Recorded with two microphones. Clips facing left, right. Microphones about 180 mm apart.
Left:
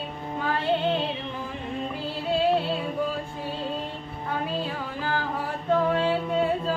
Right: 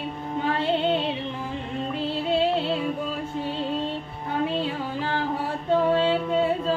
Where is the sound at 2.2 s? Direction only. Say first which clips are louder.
Left 1 dB; 25° right (ahead or behind).